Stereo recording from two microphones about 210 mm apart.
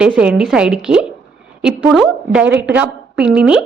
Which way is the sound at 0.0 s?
5° right (ahead or behind).